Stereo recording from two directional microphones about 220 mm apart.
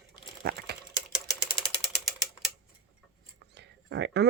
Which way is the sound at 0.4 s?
50° right (ahead or behind).